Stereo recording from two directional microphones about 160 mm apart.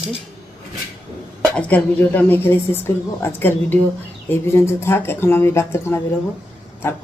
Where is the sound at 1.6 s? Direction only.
10° left (ahead or behind).